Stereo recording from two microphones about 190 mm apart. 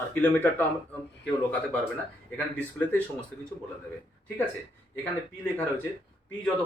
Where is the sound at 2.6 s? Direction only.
10° left (ahead or behind).